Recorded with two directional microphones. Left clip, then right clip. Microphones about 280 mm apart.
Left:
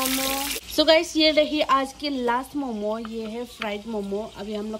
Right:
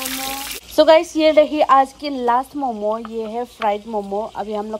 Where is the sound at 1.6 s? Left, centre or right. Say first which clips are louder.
Right 8 dB; left.